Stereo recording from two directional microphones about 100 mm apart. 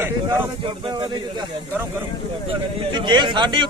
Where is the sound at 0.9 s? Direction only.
45° right (ahead or behind).